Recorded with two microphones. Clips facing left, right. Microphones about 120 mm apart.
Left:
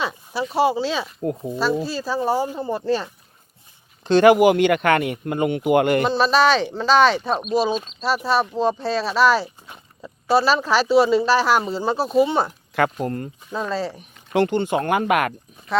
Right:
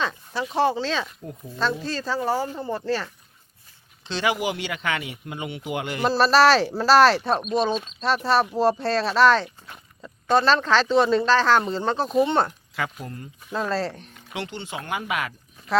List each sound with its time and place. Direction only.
0.0 s a sound: 10° left (ahead or behind)
0.5 s speech: 10° left (ahead or behind)
1.2 s speech: 65° left (ahead or behind)
1.5 s speech: 10° left (ahead or behind)
4.0 s speech: 50° left (ahead or behind)
6.0 s speech: centre (ahead or behind)
12.7 s speech: 55° left (ahead or behind)
13.5 s speech: centre (ahead or behind)
14.3 s speech: 50° left (ahead or behind)